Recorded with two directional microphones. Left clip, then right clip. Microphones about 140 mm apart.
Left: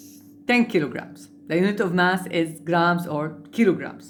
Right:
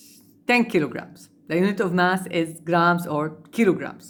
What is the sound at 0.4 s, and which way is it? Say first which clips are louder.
A woman's voice: right 1 dB; 25° right (ahead or behind).